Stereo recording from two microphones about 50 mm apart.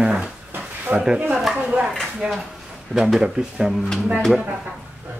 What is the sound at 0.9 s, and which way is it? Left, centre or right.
Speech, right.